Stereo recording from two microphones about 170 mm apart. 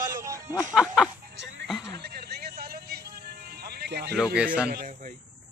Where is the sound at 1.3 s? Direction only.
90° right.